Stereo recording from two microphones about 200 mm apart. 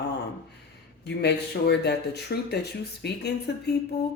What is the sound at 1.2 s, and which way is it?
Speech, 55° left (ahead or behind).